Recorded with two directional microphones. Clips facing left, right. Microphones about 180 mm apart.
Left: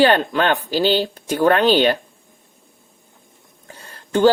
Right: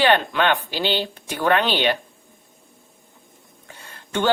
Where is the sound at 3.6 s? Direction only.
40° left (ahead or behind).